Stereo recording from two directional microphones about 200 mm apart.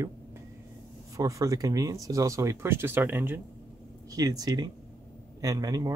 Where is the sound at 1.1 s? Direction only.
15° right (ahead or behind).